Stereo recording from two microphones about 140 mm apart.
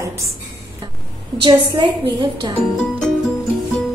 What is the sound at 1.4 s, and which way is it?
A woman's voice, 35° right (ahead or behind).